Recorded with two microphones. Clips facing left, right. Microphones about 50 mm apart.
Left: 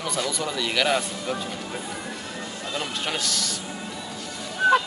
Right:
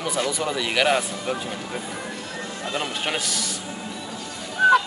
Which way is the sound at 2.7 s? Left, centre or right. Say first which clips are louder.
Right 2 dB; right.